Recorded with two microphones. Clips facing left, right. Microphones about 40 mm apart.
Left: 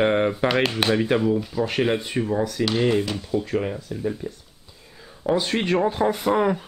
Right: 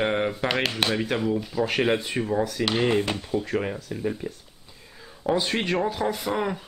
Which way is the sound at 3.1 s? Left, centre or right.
Right.